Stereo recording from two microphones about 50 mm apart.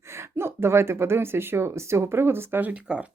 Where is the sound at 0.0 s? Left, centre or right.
Right.